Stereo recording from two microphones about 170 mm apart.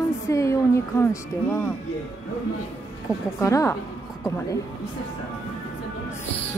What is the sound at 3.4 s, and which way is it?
Speech, 20° left (ahead or behind).